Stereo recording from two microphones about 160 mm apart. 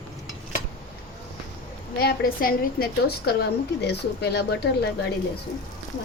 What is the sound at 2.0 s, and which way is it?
A woman's voice, 70° left (ahead or behind).